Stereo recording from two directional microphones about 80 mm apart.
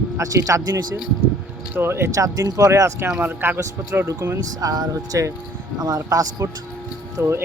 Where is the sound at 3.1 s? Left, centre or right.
Right.